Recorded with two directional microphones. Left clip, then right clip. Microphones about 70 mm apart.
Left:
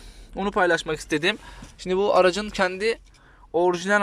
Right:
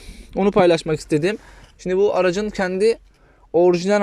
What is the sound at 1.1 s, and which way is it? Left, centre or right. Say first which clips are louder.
Speech: right 3 dB; centre.